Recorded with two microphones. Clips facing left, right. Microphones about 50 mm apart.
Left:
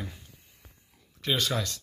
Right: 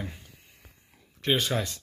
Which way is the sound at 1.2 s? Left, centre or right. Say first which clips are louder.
Right 2 dB; centre.